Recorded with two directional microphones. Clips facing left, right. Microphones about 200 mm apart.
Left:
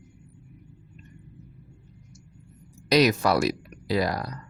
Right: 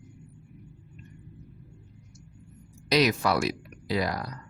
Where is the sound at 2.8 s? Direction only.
40° left (ahead or behind).